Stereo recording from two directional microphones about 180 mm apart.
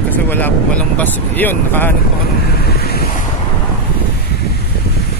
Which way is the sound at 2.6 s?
60° left (ahead or behind).